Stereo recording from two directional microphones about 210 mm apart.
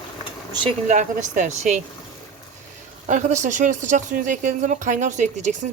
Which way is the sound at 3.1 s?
35° right (ahead or behind).